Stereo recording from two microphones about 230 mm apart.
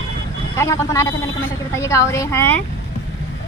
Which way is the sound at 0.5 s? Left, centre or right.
Centre.